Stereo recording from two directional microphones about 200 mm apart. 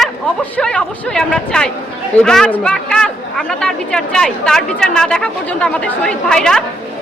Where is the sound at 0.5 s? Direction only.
5° left (ahead or behind).